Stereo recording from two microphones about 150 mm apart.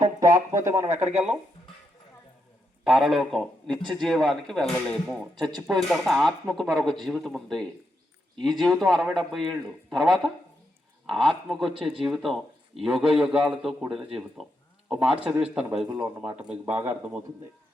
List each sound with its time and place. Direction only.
0.0 s speech: 25° right (ahead or behind)
2.8 s a man's voice: 5° right (ahead or behind)
5.3 s speech: 30° right (ahead or behind)
5.7 s a man's voice: centre (ahead or behind)